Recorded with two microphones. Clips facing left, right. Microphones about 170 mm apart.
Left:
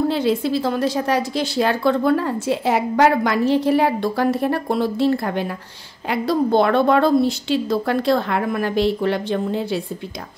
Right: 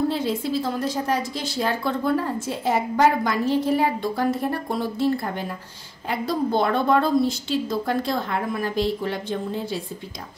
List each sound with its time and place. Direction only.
0.1 s a woman's voice: 80° left